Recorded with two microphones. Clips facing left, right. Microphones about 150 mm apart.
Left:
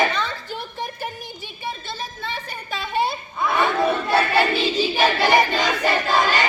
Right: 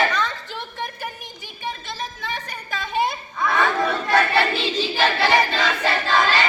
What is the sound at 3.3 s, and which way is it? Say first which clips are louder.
Crowd: even; 25° left (ahead or behind).